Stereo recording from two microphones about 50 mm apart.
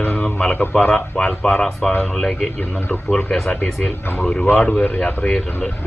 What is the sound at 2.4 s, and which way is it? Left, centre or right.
Speech, left.